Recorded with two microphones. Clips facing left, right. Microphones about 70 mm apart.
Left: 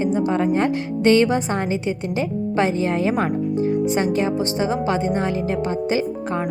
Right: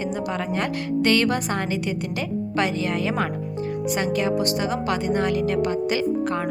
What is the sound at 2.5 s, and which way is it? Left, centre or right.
Speech, left.